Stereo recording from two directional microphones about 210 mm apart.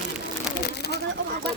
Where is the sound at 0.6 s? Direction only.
50° left (ahead or behind).